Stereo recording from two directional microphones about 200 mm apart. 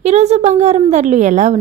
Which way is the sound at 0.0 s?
35° right (ahead or behind).